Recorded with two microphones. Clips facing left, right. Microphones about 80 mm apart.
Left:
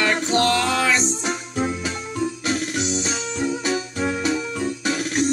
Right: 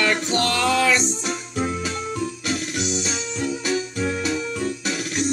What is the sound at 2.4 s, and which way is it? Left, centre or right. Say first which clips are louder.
Music: left 2 dB; left.